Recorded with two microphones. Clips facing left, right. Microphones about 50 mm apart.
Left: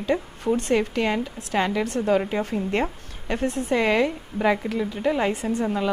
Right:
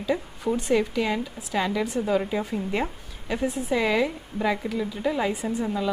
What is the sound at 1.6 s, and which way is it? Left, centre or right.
Speech, left.